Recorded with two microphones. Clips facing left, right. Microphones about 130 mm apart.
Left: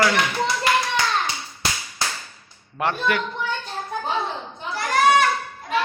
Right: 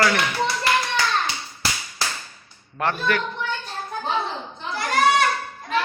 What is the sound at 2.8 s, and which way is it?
Speech, 15° left (ahead or behind).